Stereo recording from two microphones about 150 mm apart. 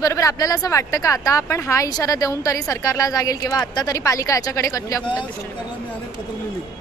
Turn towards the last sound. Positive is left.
turn(degrees=20)  # may be behind; listen again after turning